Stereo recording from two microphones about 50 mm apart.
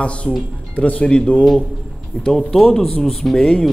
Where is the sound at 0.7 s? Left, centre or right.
Left.